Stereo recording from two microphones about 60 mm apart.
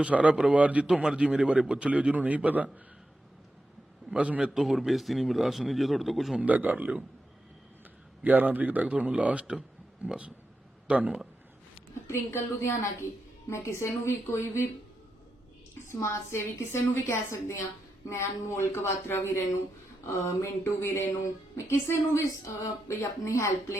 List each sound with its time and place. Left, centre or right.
0.0 s a man's voice: right
4.1 s a man's voice: centre
4.5 s a man's voice: centre
6.4 s a man's voice: right
8.2 s a man's voice: right
12.0 s a woman's voice: left
15.9 s a woman's voice: left